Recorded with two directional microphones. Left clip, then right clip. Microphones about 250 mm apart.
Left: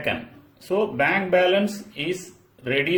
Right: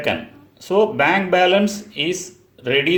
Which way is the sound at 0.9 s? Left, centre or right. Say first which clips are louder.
Right 4 dB; centre.